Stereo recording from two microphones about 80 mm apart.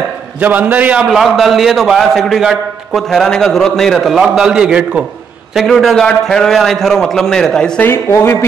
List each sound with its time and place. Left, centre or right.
0.4 s a man's voice: right
0.9 s a man's voice: centre
5.5 s a man's voice: centre
7.8 s speech: left